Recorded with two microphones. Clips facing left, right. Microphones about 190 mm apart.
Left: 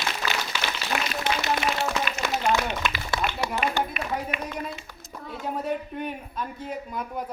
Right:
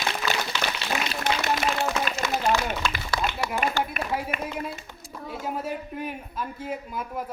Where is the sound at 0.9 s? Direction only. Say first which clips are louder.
Left 2 dB; 55° left (ahead or behind).